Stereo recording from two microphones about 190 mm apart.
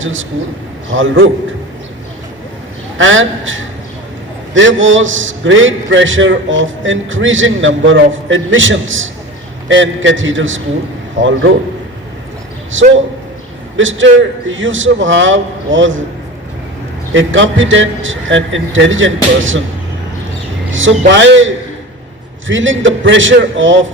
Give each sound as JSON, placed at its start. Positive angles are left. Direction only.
{"t": 0.0, "sound": "a man's voice", "side_deg": -90}
{"t": 3.0, "sound": "a man's voice", "side_deg": -90}
{"t": 12.7, "sound": "a man's voice", "side_deg": -85}
{"t": 17.1, "sound": "a man's voice", "side_deg": -80}
{"t": 21.1, "sound": "a man's voice", "side_deg": -75}